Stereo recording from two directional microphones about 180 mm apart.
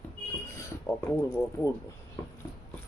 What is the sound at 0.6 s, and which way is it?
Speech, 15° left (ahead or behind).